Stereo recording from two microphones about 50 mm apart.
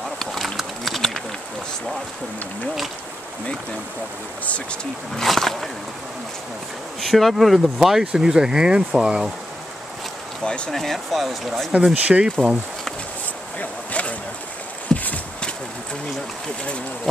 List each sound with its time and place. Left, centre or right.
0.2 s a sound: centre
5.1 s speech: centre
7.0 s speech: centre
10.4 s speech: centre
10.7 s speech: centre
11.9 s speech: right
13.6 s a sound: left
14.9 s walk: centre